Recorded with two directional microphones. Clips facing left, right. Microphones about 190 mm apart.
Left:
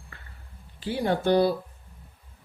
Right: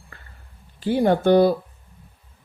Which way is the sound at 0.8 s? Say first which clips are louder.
Right 7 dB; 50° right (ahead or behind).